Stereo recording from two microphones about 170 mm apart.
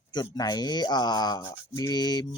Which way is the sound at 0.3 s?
25° left (ahead or behind).